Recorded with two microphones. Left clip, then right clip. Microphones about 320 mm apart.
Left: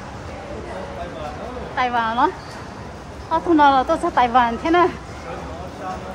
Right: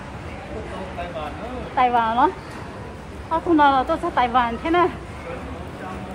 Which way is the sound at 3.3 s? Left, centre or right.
Centre.